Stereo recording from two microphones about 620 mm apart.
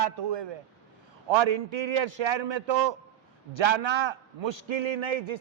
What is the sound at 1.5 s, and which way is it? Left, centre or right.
A man's voice, right.